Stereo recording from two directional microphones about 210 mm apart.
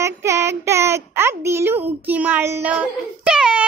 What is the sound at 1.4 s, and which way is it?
A child's voice, 10° right (ahead or behind).